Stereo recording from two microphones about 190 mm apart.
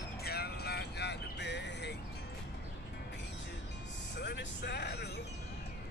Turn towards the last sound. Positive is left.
turn(degrees=60)  # may be behind; listen again after turning